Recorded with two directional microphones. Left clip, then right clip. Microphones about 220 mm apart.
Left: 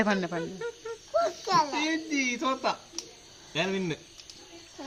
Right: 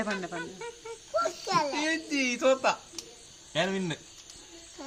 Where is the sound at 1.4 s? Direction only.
10° left (ahead or behind).